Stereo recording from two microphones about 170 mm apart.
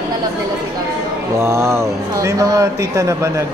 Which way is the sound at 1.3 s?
15° right (ahead or behind).